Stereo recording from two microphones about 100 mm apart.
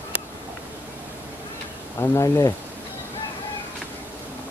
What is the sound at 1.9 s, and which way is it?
Speech, 30° left (ahead or behind).